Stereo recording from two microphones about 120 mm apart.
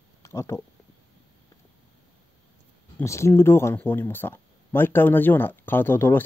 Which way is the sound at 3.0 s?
25° left (ahead or behind).